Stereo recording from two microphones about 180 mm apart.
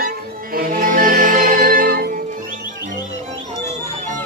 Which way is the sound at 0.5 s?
50° right (ahead or behind).